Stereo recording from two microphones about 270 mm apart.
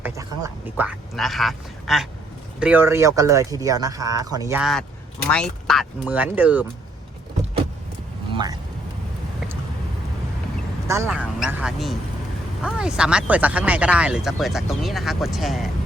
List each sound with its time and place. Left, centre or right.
0.0 s speech: centre
8.3 s a sound: centre
10.8 s speech: centre